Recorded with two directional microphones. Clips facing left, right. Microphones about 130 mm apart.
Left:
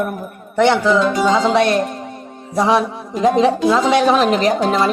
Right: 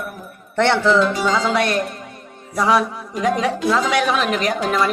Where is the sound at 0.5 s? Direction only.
15° left (ahead or behind).